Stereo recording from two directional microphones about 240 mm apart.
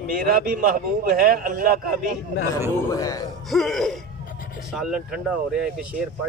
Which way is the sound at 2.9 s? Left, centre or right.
Centre.